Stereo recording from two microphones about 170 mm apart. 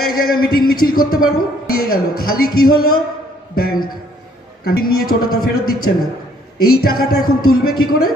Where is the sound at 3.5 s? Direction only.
65° left (ahead or behind).